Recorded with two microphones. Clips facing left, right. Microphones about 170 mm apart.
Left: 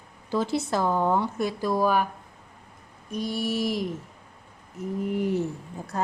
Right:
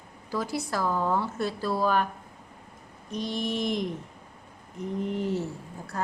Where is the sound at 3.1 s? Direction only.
10° left (ahead or behind).